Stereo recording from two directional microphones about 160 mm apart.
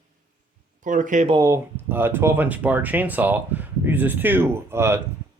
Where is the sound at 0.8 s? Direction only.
55° right (ahead or behind).